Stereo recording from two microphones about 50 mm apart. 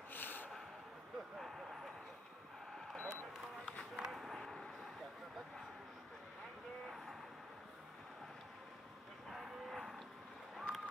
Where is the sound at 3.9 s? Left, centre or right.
Centre.